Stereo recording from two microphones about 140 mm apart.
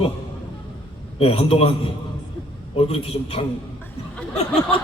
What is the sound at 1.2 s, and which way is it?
Speech, 45° left (ahead or behind).